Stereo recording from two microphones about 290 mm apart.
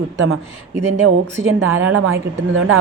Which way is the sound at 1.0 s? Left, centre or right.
Right.